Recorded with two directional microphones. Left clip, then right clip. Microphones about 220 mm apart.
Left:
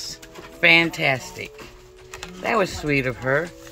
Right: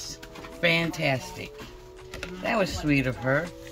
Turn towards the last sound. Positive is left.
turn(degrees=20)  # may be behind; listen again after turning